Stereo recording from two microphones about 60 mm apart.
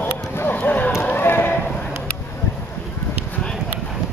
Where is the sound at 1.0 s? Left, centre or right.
Left.